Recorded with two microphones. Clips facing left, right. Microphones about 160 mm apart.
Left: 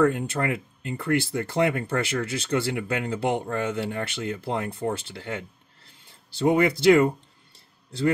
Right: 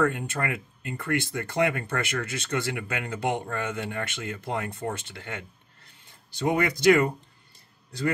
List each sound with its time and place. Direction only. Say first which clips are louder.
0.1 s speech: left 4 dB; 30° left (ahead or behind)